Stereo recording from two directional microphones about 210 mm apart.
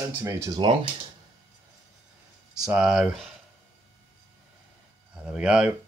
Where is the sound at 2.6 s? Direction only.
5° right (ahead or behind).